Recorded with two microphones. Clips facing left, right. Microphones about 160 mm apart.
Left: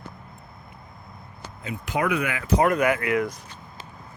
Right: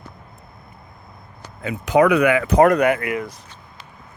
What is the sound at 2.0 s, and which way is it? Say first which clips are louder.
Speech: right 8 dB; 75° right (ahead or behind).